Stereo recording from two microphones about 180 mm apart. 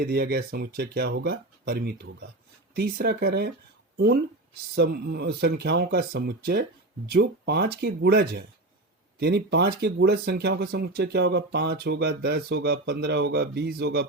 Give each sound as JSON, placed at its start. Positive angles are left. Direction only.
{"t": 0.0, "sound": "speech", "side_deg": -60}